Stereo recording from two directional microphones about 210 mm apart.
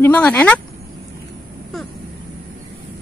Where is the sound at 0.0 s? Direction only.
5° left (ahead or behind).